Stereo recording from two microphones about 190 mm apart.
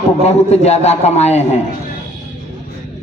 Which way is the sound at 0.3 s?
35° left (ahead or behind).